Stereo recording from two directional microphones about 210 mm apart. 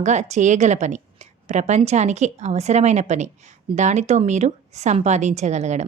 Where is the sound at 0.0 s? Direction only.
35° right (ahead or behind).